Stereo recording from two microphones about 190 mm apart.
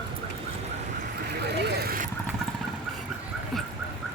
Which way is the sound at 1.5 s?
60° right (ahead or behind).